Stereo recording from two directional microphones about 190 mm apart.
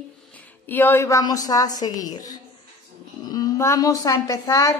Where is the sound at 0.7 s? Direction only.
10° left (ahead or behind).